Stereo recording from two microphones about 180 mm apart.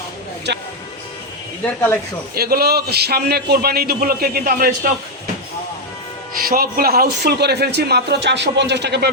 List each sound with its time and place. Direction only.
0.5 s speech: 70° right (ahead or behind)
2.3 s speech: 60° right (ahead or behind)
6.3 s speech: 55° right (ahead or behind)